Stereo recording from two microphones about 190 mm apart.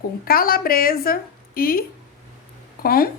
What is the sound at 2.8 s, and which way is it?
Speech, 50° left (ahead or behind).